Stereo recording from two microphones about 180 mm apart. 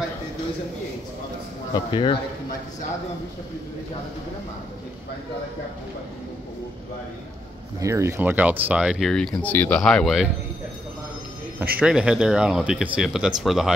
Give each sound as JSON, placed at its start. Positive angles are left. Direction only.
{"t": 1.7, "sound": "speech", "side_deg": 30}
{"t": 7.8, "sound": "speech", "side_deg": -15}
{"t": 11.8, "sound": "speech", "side_deg": -5}